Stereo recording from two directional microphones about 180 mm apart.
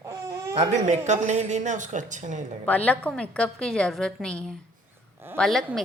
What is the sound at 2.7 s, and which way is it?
A woman's voice, 10° left (ahead or behind).